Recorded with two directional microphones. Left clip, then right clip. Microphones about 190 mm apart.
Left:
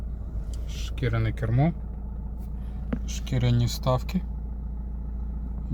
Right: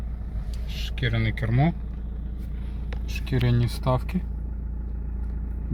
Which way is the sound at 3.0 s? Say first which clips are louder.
Right 4 dB; 5° right (ahead or behind).